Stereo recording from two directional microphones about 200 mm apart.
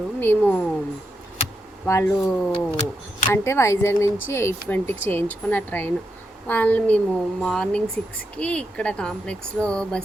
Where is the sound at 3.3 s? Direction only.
15° left (ahead or behind).